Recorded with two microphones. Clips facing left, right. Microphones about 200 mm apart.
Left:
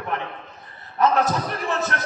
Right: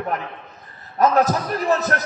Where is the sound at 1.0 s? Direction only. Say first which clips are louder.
Right 3 dB; 40° right (ahead or behind).